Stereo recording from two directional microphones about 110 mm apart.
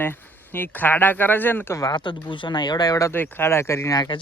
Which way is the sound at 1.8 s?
40° left (ahead or behind).